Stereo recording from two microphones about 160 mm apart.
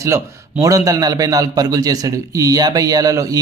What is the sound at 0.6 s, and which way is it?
Speech, 20° right (ahead or behind).